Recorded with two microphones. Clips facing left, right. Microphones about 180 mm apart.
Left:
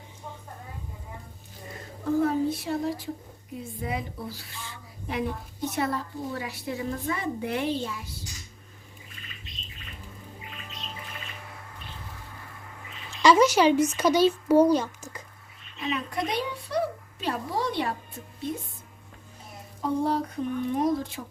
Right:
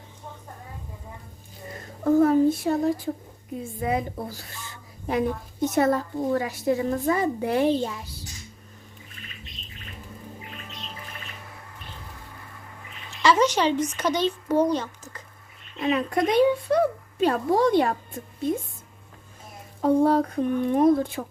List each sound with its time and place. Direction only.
2.2 s speech: 50° right (ahead or behind)
13.2 s speech: 10° left (ahead or behind)
15.8 s speech: 50° right (ahead or behind)
19.8 s speech: 55° right (ahead or behind)